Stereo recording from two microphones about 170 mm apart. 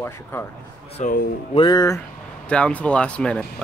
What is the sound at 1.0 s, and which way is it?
Speech, 45° left (ahead or behind).